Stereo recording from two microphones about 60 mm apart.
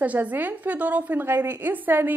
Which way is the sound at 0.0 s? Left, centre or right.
Right.